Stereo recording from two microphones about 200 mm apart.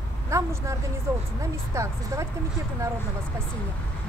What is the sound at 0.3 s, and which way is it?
Speech, 15° right (ahead or behind).